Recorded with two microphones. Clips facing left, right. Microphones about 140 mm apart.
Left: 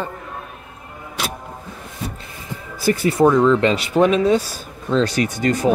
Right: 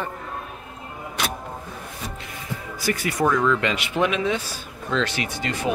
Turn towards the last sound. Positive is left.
turn(degrees=40)  # may be behind; listen again after turning